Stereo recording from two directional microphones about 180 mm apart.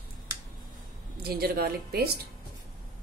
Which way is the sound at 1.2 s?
60° right (ahead or behind).